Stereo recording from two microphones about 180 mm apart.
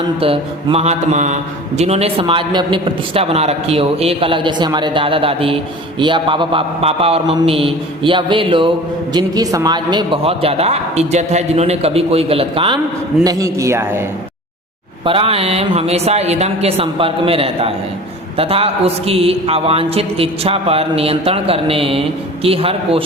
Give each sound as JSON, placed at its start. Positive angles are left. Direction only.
{"t": 0.2, "sound": "a man's voice", "side_deg": -30}
{"t": 13.2, "sound": "a man's voice", "side_deg": -15}
{"t": 15.0, "sound": "a man's voice", "side_deg": -30}